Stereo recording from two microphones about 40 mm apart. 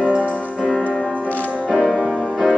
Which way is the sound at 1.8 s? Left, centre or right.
Centre.